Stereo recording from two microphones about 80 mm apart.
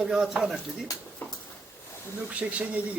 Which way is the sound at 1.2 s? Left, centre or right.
Left.